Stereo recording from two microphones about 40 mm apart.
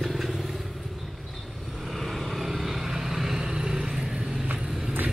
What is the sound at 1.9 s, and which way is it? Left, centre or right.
Vehicle, centre.